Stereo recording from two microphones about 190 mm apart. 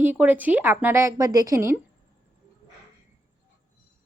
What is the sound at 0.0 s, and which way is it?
A woman's voice, 10° right (ahead or behind).